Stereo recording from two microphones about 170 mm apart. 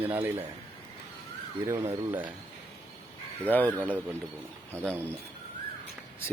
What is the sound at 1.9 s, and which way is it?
Speech, 10° right (ahead or behind).